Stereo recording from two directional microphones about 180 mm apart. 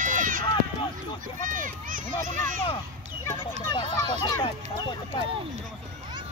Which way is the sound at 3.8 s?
25° left (ahead or behind).